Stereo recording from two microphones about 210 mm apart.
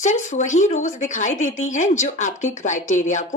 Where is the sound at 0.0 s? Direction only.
35° left (ahead or behind).